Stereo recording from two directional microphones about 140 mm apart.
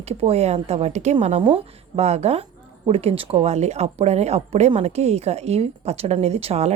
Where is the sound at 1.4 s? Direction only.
35° right (ahead or behind).